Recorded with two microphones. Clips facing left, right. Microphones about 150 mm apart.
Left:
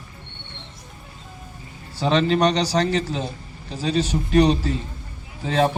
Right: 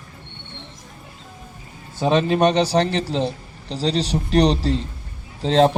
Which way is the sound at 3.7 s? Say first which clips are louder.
Right 1 dB; 75° right (ahead or behind).